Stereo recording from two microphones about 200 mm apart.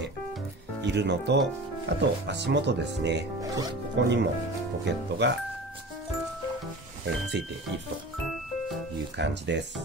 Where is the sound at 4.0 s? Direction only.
60° right (ahead or behind).